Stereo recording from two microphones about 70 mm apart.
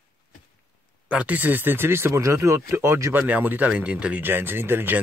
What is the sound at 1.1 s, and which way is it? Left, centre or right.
Speech, right.